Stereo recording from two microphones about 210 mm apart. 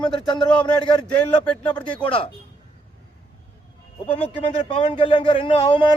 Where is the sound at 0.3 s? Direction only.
20° left (ahead or behind).